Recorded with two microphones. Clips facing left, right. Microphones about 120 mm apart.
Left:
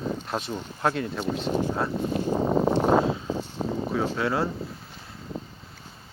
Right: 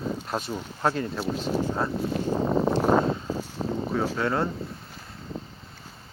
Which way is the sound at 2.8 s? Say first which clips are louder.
Even; 5° left (ahead or behind).